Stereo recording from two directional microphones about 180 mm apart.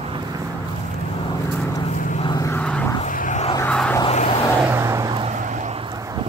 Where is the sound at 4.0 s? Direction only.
35° left (ahead or behind).